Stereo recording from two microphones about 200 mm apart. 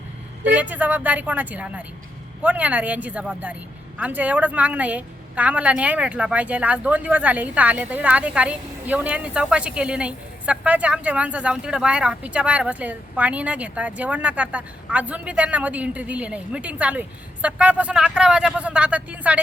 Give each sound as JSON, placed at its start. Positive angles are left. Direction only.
{"t": 0.4, "sound": "speech", "side_deg": -10}